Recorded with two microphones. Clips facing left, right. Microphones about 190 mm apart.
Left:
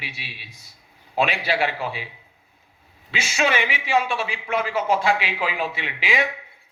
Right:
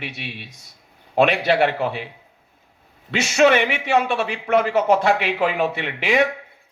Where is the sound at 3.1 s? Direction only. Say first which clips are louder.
Right 8 dB; 60° right (ahead or behind).